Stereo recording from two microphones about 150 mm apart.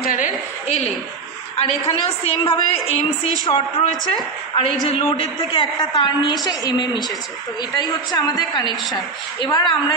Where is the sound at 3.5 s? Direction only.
35° left (ahead or behind).